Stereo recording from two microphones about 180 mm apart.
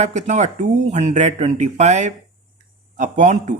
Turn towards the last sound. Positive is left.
turn(degrees=-45)  # may be behind; listen again after turning